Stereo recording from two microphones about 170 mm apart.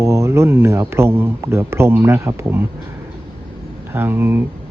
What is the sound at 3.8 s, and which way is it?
Speech, 10° right (ahead or behind).